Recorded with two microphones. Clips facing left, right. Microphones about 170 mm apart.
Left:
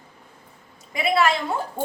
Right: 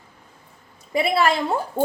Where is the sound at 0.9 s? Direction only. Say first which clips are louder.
Right 1 dB; 30° right (ahead or behind).